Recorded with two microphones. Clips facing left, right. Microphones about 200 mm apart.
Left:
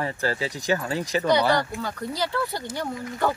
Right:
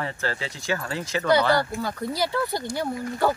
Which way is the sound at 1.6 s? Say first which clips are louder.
Right 2 dB; 10° right (ahead or behind).